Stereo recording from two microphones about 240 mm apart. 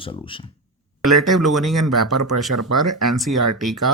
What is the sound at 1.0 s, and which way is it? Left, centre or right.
Speech, centre.